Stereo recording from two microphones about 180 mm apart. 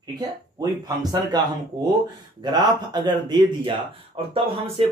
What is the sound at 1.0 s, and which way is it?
Speech, 25° right (ahead or behind).